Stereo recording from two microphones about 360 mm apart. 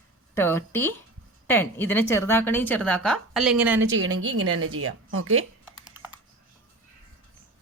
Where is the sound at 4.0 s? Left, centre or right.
Right.